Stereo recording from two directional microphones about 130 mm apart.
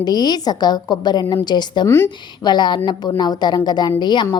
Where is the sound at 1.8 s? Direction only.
20° left (ahead or behind).